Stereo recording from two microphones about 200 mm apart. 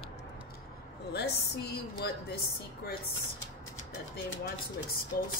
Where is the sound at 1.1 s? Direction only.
55° left (ahead or behind).